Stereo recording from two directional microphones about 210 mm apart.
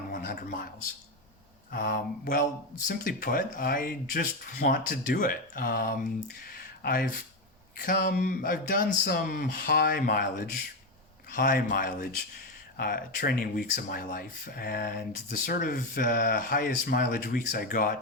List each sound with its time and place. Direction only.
0.1 s speech: 40° left (ahead or behind)
1.7 s speech: 40° left (ahead or behind)
6.4 s a sound: 45° left (ahead or behind)
7.8 s speech: 40° left (ahead or behind)